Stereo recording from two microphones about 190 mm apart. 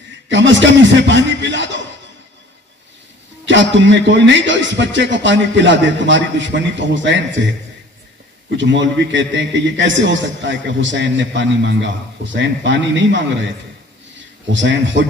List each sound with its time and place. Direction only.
0.3 s a man's voice: 75° right (ahead or behind)
3.4 s a man's voice: 75° right (ahead or behind)
8.5 s a man's voice: 75° right (ahead or behind)
14.5 s a man's voice: 75° right (ahead or behind)